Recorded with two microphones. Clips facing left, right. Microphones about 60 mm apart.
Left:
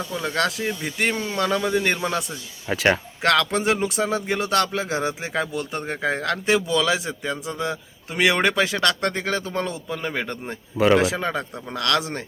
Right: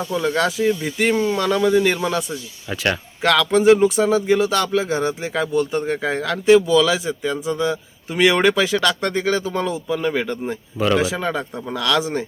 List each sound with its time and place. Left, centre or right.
0.0 s speech: centre
2.6 s speech: left
3.2 s speech: centre